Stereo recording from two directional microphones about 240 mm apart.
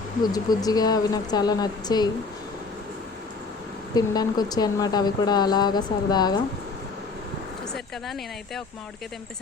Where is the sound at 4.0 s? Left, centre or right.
Centre.